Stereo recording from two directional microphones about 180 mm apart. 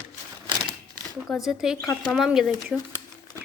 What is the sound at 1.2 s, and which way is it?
A woman's voice, centre (ahead or behind).